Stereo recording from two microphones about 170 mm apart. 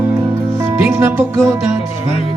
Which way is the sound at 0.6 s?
15° right (ahead or behind).